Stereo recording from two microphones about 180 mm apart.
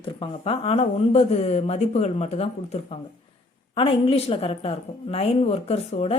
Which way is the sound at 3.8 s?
30° left (ahead or behind).